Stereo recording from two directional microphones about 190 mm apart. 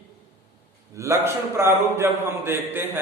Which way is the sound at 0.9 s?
15° right (ahead or behind).